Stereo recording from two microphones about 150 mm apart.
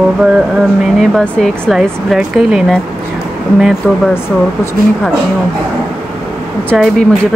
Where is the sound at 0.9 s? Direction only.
5° left (ahead or behind).